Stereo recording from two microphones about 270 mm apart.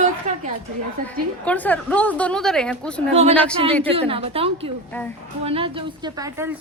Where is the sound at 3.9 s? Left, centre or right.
Right.